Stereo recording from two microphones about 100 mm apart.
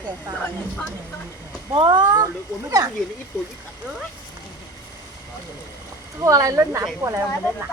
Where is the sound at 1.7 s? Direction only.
50° right (ahead or behind).